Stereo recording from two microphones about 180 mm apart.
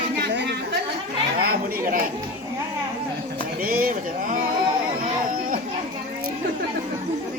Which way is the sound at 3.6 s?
55° right (ahead or behind).